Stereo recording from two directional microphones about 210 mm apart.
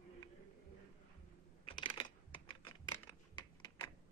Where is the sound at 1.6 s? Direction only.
25° left (ahead or behind).